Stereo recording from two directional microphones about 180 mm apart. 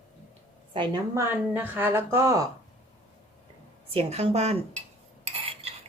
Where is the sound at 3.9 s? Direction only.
35° right (ahead or behind).